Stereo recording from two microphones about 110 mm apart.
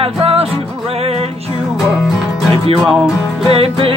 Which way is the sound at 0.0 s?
60° right (ahead or behind).